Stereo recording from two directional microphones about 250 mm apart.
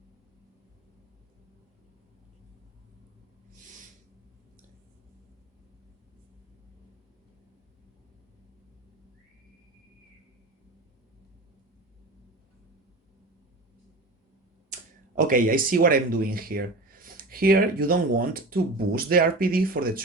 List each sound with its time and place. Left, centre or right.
15.1 s speech: right